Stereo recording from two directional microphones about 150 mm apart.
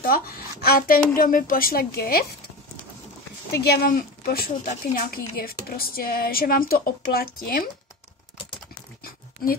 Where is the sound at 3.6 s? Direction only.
80° left.